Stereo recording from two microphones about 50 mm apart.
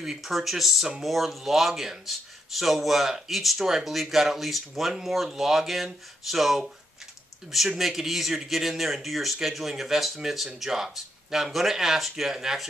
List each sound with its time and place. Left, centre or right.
0.0 s speech: centre